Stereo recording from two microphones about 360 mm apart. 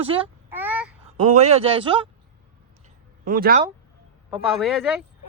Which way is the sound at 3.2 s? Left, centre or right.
Right.